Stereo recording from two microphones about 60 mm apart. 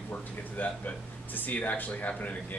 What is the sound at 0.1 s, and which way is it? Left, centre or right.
Speech, left.